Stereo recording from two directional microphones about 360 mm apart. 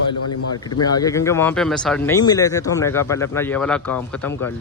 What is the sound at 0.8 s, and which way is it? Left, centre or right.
Speech, centre.